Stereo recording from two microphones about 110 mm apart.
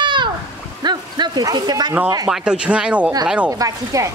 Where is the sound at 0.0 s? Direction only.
45° right (ahead or behind).